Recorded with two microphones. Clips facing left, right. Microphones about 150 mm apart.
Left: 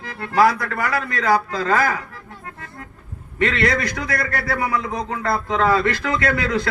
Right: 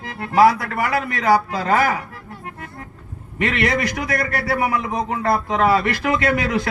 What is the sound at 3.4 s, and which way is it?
A man's voice, 20° right (ahead or behind).